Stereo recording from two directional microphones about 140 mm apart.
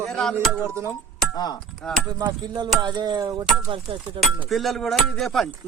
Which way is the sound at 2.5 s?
30° right (ahead or behind).